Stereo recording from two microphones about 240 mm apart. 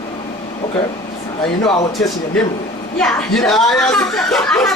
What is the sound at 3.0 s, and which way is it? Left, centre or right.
Speech, centre.